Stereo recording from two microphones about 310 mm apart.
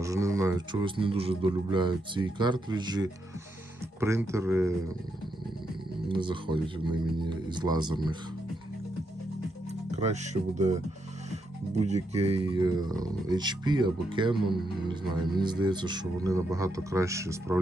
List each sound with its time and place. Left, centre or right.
0.0 s speech: centre
6.1 s speech: centre
9.6 s speech: right
11.9 s speech: centre